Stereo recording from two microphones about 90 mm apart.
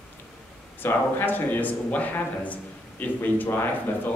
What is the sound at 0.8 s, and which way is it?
A man's voice, 25° left (ahead or behind).